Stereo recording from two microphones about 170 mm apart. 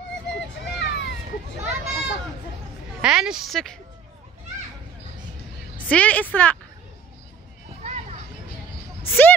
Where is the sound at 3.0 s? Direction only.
5° right (ahead or behind).